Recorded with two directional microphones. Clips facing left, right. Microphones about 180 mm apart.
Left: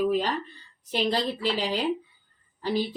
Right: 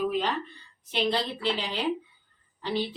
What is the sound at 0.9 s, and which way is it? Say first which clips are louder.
Speech: left 2 dB; 40° left (ahead or behind).